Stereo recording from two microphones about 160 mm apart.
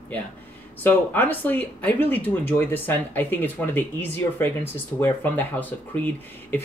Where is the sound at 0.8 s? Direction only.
10° left (ahead or behind).